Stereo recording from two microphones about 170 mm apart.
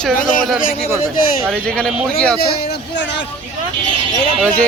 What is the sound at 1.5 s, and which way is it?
Speech, 5° left (ahead or behind).